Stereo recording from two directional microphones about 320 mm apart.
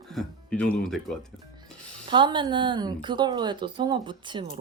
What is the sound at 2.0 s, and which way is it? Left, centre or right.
Speech, centre.